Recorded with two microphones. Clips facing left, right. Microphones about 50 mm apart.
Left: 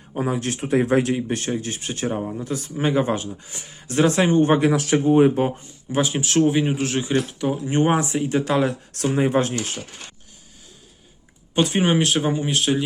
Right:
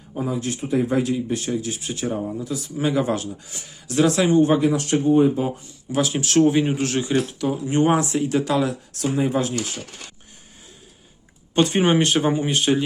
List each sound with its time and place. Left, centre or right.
0.1 s speech: left
4.5 s speech: left
5.4 s speech: left
6.2 s speech: centre; by 8.6 s left
8.6 s speech: left
11.5 s speech: centre